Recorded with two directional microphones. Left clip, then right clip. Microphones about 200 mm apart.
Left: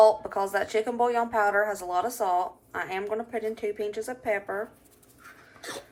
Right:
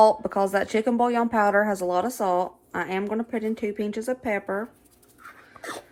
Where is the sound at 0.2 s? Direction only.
45° right (ahead or behind).